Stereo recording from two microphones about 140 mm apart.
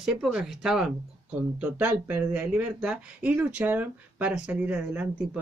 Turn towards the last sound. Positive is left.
turn(degrees=-5)  # may be behind; listen again after turning